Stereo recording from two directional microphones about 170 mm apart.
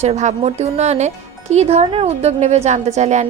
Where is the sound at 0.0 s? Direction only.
40° right (ahead or behind).